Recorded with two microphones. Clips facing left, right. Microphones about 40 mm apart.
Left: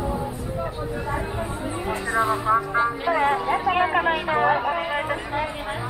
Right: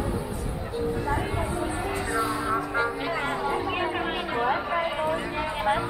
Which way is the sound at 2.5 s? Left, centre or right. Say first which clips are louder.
Left 5 dB; centre.